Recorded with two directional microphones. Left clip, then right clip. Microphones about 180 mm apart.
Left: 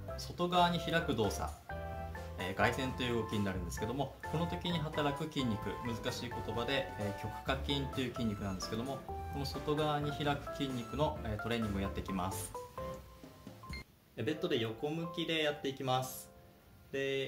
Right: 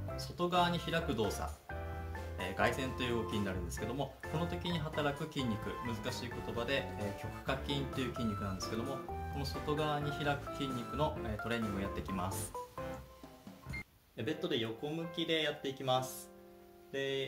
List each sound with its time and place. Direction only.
0.1 s speech: centre (ahead or behind)
2.3 s speech: centre (ahead or behind)
14.1 s speech: 15° left (ahead or behind)